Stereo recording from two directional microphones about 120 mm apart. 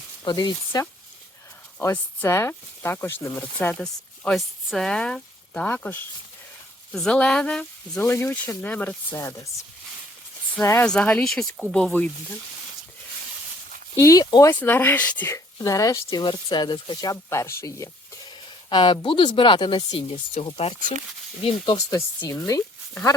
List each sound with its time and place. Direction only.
0.3 s speech: 35° left (ahead or behind)
1.8 s speech: 25° left (ahead or behind)
3.6 s speech: 10° left (ahead or behind)
8.0 s speech: 20° left (ahead or behind)
10.6 s speech: 25° left (ahead or behind)
10.8 s speech: 10° left (ahead or behind)
14.0 s speech: 30° left (ahead or behind)
14.5 s speech: 15° left (ahead or behind)
15.3 s speech: 30° left (ahead or behind)
16.2 s speech: 40° left (ahead or behind)
18.3 s speech: 40° left (ahead or behind)
21.8 s speech: 30° left (ahead or behind)